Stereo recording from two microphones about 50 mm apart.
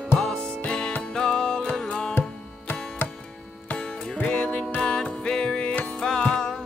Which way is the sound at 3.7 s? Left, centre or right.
Centre.